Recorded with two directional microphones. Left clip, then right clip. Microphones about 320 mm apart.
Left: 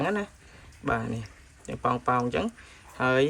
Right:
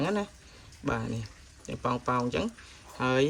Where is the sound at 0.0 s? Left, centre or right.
Centre.